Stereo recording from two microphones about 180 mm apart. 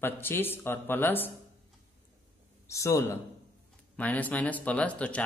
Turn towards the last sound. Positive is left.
turn(degrees=5)  # may be behind; listen again after turning